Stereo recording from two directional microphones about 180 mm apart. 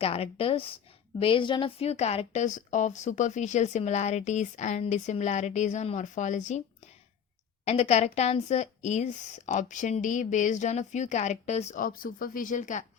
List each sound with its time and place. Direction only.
0.0 s a woman's voice: 35° left (ahead or behind)
7.6 s a woman's voice: 35° left (ahead or behind)